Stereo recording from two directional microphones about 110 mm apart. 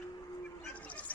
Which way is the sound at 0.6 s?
15° left (ahead or behind).